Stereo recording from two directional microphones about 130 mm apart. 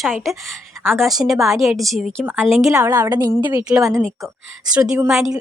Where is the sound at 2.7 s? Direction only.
25° right (ahead or behind).